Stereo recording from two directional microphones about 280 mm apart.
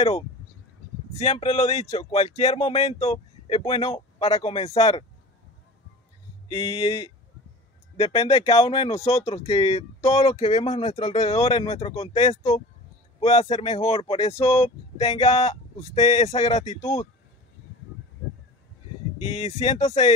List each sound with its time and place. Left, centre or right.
1.1 s speech: left
6.5 s speech: centre
19.1 s speech: left